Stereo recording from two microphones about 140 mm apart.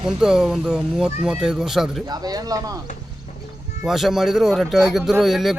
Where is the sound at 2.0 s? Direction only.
25° right (ahead or behind).